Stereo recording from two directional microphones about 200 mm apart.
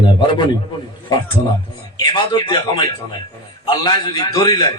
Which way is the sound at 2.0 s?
20° left (ahead or behind).